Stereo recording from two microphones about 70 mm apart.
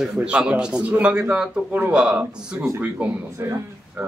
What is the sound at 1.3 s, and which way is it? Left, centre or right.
Speech, centre.